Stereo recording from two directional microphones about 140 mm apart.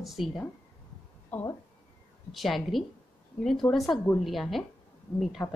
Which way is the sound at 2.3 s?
Centre (ahead or behind).